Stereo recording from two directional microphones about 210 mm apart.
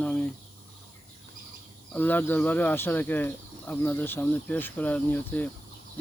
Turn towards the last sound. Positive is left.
turn(degrees=10)  # may be behind; listen again after turning